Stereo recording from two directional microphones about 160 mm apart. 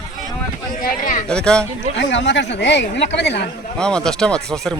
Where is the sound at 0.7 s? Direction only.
60° left (ahead or behind).